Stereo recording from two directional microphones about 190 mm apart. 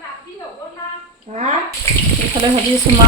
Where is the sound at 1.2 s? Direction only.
35° right (ahead or behind).